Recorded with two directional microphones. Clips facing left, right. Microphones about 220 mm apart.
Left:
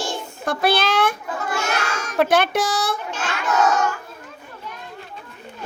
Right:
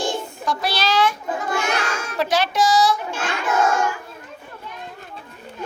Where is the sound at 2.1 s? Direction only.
55° left (ahead or behind).